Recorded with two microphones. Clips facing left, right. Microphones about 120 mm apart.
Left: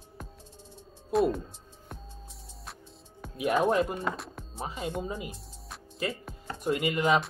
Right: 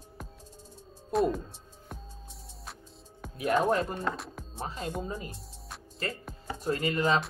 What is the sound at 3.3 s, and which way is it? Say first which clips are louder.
Speech: left 1 dB; 10° left (ahead or behind).